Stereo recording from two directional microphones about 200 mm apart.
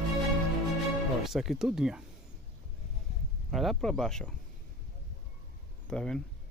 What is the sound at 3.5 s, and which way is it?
Speech, centre (ahead or behind).